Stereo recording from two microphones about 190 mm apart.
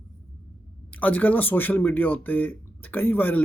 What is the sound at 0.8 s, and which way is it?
Speech, 10° left (ahead or behind).